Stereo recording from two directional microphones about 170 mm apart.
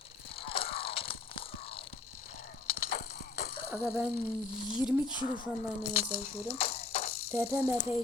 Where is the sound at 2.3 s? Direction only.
55° left (ahead or behind).